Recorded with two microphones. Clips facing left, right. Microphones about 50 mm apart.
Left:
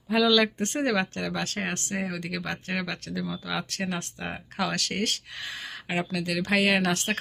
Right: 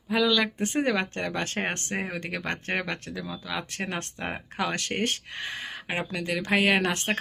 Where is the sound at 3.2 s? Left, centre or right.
Centre.